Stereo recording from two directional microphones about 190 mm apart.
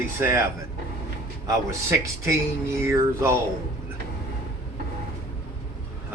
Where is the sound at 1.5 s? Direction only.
15° right (ahead or behind).